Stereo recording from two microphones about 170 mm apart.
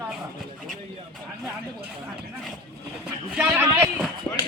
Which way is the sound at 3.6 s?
15° right (ahead or behind).